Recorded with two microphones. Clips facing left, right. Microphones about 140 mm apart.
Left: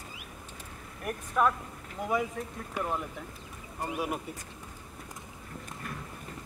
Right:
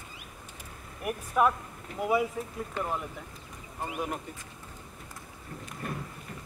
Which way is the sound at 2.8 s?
10° left (ahead or behind).